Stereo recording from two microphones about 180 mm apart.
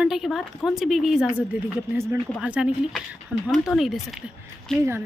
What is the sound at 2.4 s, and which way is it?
A woman's voice, 5° right (ahead or behind).